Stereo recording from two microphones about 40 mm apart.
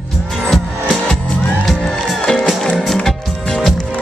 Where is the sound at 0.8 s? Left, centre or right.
Centre.